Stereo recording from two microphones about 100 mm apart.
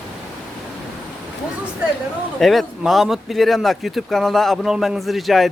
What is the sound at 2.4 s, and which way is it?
Speech, centre (ahead or behind).